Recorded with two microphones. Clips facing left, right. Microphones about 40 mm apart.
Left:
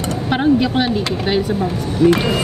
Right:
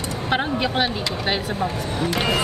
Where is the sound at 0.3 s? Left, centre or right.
Centre.